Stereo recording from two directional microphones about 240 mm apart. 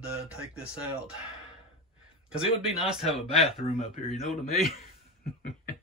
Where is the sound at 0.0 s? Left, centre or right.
Centre.